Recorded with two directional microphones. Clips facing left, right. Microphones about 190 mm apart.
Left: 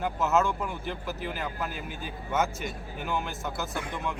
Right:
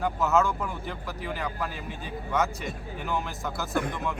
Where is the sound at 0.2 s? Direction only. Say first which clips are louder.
Even; centre (ahead or behind).